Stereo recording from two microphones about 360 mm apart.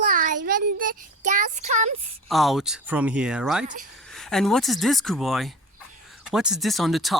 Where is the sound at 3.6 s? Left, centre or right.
Right.